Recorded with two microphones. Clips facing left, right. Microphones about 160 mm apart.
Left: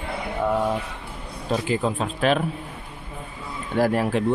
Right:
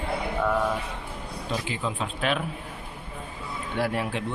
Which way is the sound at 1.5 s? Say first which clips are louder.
Left 8 dB; 45° left (ahead or behind).